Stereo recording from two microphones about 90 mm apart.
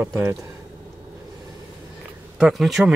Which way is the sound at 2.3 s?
5° right (ahead or behind).